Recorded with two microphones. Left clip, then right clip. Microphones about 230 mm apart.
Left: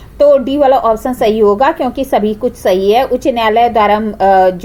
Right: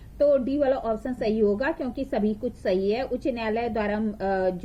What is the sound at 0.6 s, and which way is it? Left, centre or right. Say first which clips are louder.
A woman's voice: left 15 dB; centre.